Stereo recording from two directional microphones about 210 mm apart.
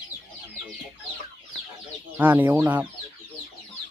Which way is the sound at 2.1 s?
10° right (ahead or behind).